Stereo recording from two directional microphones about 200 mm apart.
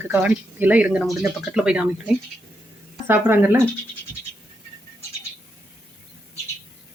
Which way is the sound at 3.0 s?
10° right (ahead or behind).